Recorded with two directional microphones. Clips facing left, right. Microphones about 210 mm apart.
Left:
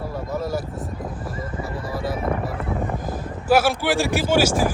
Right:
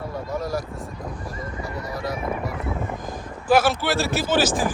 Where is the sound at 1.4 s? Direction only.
30° left (ahead or behind).